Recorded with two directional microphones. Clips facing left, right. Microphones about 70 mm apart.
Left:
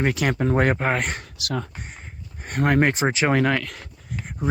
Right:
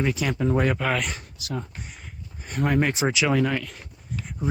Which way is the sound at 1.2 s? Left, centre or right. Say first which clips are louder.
Left 4 dB; left.